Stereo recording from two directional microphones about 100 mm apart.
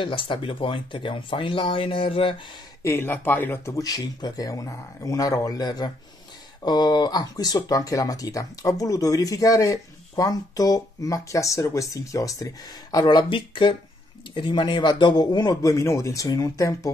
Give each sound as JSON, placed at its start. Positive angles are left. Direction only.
{"t": 0.0, "sound": "speech", "side_deg": 60}
{"t": 2.8, "sound": "speech", "side_deg": 25}
{"t": 3.7, "sound": "speech", "side_deg": 40}
{"t": 12.9, "sound": "speech", "side_deg": 50}